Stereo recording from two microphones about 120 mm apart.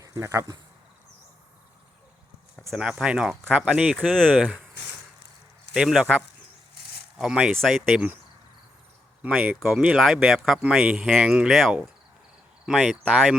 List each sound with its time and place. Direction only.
0.0 s speech: 25° right (ahead or behind)
2.7 s speech: 5° right (ahead or behind)
3.9 s speech: 5° left (ahead or behind)
5.7 s speech: 5° right (ahead or behind)
9.8 s speech: 5° right (ahead or behind)
13.0 s speech: 10° right (ahead or behind)